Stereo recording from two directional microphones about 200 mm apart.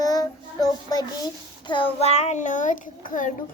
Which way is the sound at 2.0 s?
35° left (ahead or behind).